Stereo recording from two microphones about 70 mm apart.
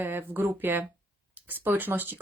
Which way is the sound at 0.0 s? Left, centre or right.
Right.